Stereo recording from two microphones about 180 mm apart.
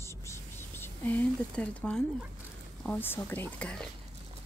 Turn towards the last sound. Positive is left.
turn(degrees=5)  # may be behind; listen again after turning